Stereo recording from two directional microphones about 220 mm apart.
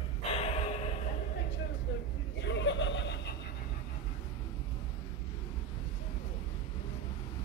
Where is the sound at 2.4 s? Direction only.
55° left (ahead or behind).